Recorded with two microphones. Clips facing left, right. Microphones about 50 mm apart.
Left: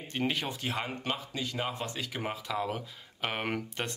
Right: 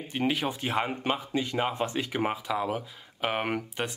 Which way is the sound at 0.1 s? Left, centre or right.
Centre.